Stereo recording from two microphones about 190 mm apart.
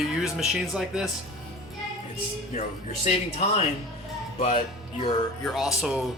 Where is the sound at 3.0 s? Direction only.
35° left (ahead or behind).